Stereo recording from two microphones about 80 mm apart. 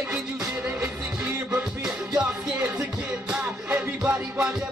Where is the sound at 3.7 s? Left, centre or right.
Right.